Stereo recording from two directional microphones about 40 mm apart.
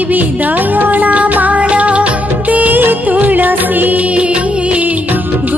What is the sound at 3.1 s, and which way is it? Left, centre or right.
Music, right.